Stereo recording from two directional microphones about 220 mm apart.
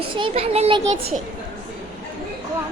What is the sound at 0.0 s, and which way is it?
Speech, 25° right (ahead or behind).